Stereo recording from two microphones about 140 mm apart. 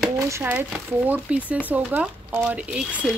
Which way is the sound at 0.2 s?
20° right (ahead or behind).